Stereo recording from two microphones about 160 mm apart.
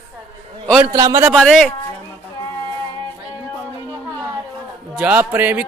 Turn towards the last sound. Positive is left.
turn(degrees=-10)  # may be behind; listen again after turning